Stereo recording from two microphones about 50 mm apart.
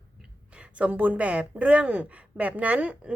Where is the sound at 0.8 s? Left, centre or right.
Right.